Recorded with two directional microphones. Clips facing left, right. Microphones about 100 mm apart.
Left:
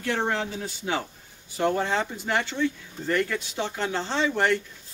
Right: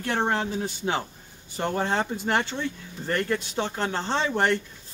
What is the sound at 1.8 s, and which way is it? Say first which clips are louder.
Speech: right 1 dB; 45° right (ahead or behind).